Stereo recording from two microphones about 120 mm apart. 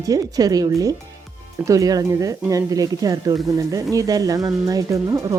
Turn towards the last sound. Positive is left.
turn(degrees=-25)  # may be behind; listen again after turning